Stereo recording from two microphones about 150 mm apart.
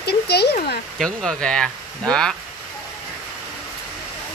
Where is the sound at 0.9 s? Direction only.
5° left (ahead or behind).